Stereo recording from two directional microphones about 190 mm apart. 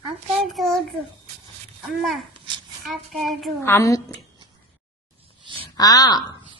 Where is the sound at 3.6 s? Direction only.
15° left (ahead or behind).